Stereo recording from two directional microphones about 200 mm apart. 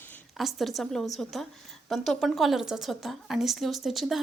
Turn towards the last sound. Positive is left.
turn(degrees=0)  # may be behind; listen again after turning